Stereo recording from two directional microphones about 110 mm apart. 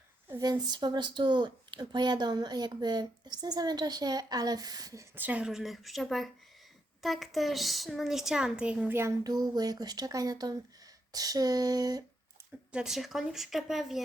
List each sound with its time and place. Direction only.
0.6 s speech: 40° right (ahead or behind)
5.1 s a woman's voice: 15° right (ahead or behind)
9.2 s speech: 35° right (ahead or behind)
12.7 s a woman's voice: 5° right (ahead or behind)